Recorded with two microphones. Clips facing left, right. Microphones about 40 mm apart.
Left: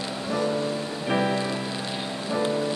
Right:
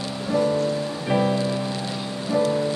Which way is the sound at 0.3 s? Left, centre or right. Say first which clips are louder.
Right 5 dB; centre.